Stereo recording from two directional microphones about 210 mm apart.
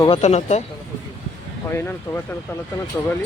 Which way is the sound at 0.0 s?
30° left (ahead or behind).